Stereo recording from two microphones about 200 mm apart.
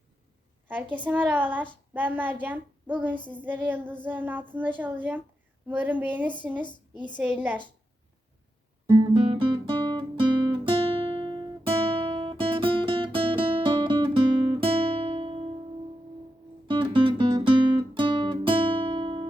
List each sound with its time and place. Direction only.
0.7 s a woman's voice: 10° right (ahead or behind)
8.9 s guitar: 20° right (ahead or behind)
16.6 s guitar: 25° right (ahead or behind)